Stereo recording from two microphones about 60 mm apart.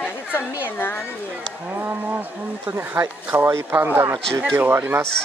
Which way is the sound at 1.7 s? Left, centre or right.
Right.